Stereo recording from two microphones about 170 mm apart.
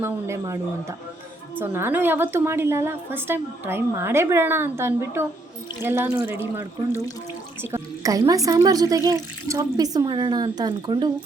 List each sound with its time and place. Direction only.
0.0 s a woman's voice: 15° right (ahead or behind)
7.6 s speech: 15° right (ahead or behind)